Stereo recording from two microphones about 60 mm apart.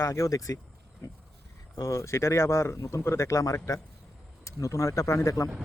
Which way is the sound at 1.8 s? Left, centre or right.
Left.